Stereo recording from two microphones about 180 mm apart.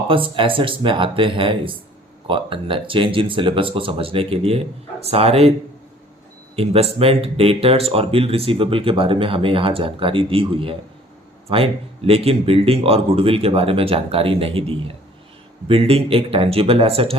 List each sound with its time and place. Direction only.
0.1 s speech: 30° right (ahead or behind)
6.6 s speech: 35° right (ahead or behind)